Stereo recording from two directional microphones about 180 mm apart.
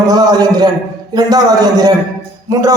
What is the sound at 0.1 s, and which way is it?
A man's voice, 20° right (ahead or behind).